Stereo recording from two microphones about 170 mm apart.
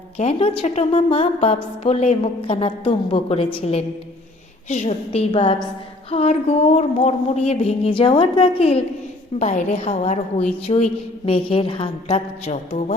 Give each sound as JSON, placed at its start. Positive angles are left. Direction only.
{"t": 0.2, "sound": "a woman's voice", "side_deg": 35}
{"t": 5.3, "sound": "a woman's voice", "side_deg": 30}
{"t": 12.5, "sound": "a woman's voice", "side_deg": 45}